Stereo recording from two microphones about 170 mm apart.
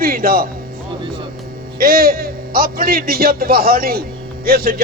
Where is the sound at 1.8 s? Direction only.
60° right (ahead or behind).